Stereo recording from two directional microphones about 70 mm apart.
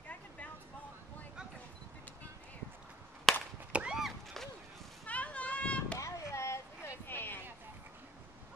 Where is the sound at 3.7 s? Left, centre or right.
Centre.